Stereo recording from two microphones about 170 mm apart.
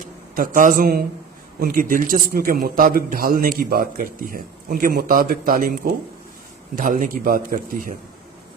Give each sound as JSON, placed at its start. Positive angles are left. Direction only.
{"t": 0.3, "sound": "a man's voice", "side_deg": -55}